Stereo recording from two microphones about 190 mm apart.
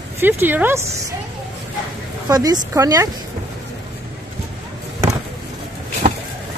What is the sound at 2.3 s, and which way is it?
Speech, 20° right (ahead or behind).